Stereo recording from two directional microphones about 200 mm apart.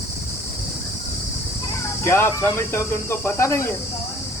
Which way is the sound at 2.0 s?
10° left (ahead or behind).